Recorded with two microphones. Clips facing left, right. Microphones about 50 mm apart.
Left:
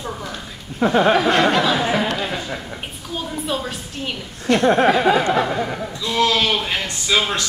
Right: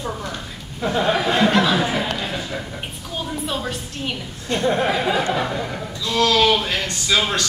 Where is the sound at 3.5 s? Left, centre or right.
Centre.